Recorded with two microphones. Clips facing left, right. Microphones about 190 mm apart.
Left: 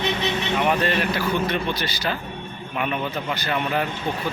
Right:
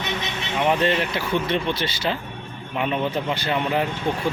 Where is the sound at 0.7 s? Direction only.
25° right (ahead or behind).